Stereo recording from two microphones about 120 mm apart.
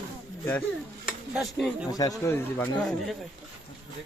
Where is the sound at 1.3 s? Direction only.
Centre (ahead or behind).